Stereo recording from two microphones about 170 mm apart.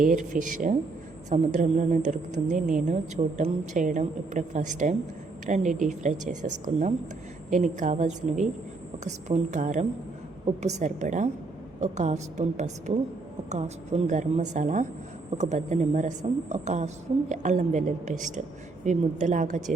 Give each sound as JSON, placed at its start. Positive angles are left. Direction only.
{"t": 0.0, "sound": "a woman's voice", "side_deg": -50}